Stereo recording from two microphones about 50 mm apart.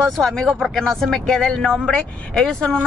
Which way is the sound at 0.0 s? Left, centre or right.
Centre.